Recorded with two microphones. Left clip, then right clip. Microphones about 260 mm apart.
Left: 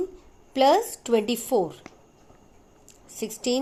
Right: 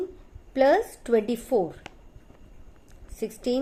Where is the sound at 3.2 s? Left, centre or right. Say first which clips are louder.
Left 1 dB; centre.